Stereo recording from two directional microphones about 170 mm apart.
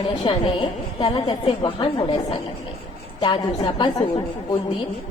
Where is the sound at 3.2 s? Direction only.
30° left (ahead or behind).